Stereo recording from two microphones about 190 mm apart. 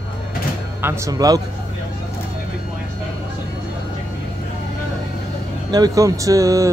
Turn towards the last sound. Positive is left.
turn(degrees=-15)  # may be behind; listen again after turning